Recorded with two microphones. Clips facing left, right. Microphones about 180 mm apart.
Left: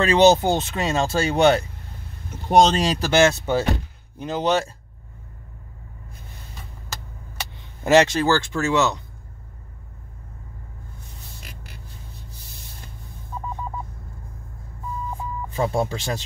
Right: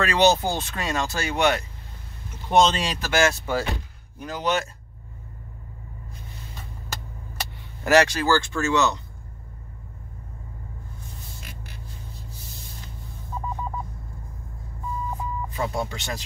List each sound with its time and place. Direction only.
0.0 s speech: 25° left (ahead or behind)
2.4 s speech: 45° left (ahead or behind); by 4.6 s 30° left (ahead or behind)
7.8 s speech: 25° left (ahead or behind)
15.5 s speech: 30° left (ahead or behind)